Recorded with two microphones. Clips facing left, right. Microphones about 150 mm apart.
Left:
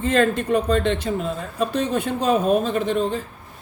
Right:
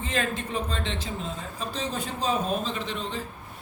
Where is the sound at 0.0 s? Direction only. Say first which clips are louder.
Left 10 dB; 65° left (ahead or behind).